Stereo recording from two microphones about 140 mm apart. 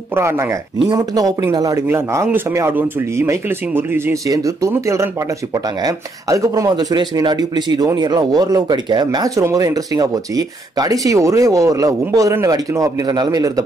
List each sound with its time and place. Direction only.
0.1 s speech: 15° right (ahead or behind)